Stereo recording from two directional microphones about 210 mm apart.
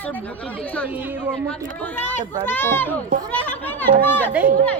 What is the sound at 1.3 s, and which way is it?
Speech, 5° left (ahead or behind).